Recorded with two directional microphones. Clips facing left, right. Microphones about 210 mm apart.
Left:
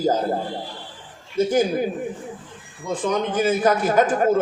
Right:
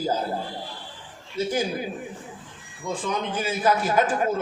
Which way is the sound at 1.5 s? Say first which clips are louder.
Left 6 dB; 50° left (ahead or behind).